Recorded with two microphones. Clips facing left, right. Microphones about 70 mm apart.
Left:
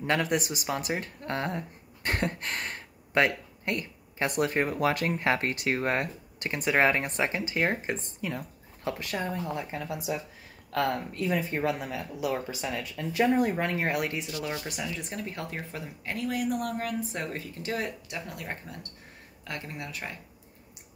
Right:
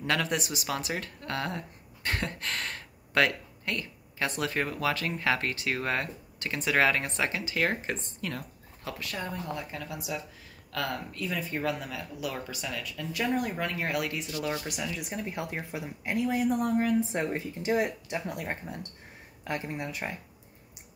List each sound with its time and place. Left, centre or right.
0.0 s speech: left
2.0 s a sound: left
4.4 s speech: left
8.2 s speech: centre
8.8 s speech: left
14.3 s speech: centre; by 20.2 s right